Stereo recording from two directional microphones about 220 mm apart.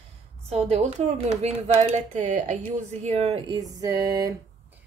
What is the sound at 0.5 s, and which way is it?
Speech, 30° right (ahead or behind).